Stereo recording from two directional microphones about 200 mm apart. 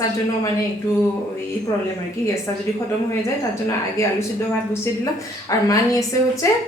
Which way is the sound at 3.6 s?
15° left (ahead or behind).